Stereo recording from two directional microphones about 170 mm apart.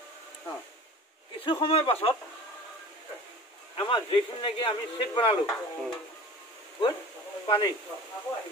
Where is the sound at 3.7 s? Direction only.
30° left (ahead or behind).